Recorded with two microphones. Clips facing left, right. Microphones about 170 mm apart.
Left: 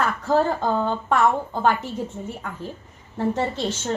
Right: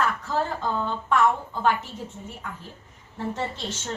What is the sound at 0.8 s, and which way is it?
Speech, 40° left (ahead or behind).